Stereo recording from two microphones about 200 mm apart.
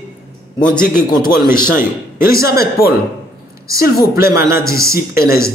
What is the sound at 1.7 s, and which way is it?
Speech, 10° right (ahead or behind).